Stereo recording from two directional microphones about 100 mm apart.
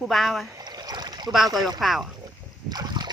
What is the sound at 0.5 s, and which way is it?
Boat, 45° right (ahead or behind).